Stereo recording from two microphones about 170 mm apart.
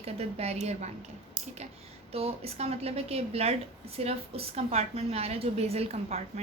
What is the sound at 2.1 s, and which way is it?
A woman's voice, 35° right (ahead or behind).